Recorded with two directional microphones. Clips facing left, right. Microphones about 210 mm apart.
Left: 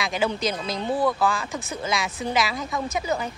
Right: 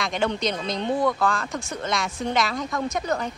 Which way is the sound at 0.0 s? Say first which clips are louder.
Even; 5° left (ahead or behind).